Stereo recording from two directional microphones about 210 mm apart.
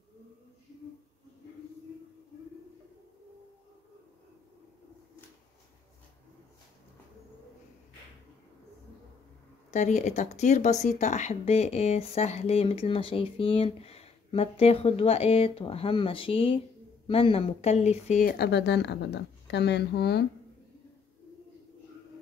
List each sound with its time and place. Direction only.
9.7 s speech: 35° left (ahead or behind); by 20.2 s 50° left (ahead or behind)